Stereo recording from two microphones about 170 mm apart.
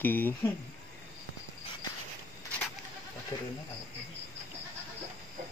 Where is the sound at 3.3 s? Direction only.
30° left (ahead or behind).